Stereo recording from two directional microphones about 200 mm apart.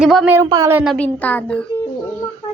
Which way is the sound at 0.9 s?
5° left (ahead or behind).